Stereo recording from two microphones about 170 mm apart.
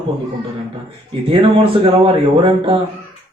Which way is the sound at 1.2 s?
30° right (ahead or behind).